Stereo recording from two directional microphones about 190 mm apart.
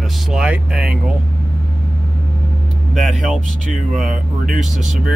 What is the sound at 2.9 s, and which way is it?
Speech, centre (ahead or behind).